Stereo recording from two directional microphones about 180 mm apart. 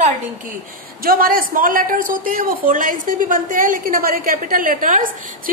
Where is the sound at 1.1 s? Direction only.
50° right (ahead or behind).